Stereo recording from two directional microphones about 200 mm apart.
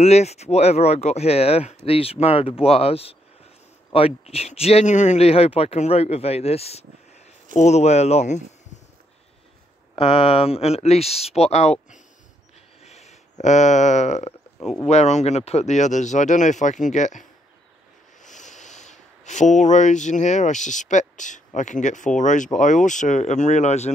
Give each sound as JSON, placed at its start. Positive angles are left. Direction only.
{"t": 0.0, "sound": "speech", "side_deg": 30}
{"t": 9.9, "sound": "speech", "side_deg": 30}